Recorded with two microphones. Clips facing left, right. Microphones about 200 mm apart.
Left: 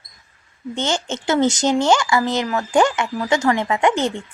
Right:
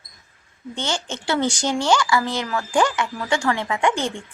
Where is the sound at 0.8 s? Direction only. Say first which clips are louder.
Left 4 dB; 20° left (ahead or behind).